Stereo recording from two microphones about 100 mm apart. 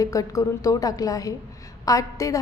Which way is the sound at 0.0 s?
35° left (ahead or behind).